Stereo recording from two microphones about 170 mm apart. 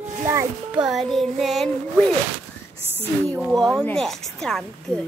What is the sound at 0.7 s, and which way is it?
A woman's voice, 5° right (ahead or behind).